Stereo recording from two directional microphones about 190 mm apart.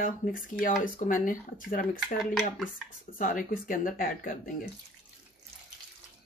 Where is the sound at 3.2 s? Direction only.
45° left (ahead or behind).